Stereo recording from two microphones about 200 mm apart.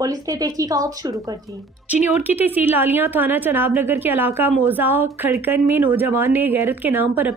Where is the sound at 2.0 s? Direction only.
10° right (ahead or behind).